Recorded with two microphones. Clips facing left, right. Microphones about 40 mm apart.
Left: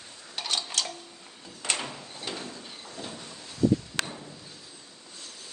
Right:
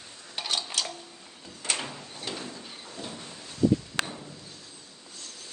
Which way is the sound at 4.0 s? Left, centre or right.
Centre.